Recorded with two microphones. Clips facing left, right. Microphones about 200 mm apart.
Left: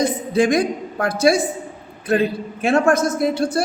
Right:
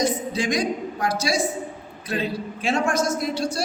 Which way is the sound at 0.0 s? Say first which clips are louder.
Left 6 dB; 55° left (ahead or behind).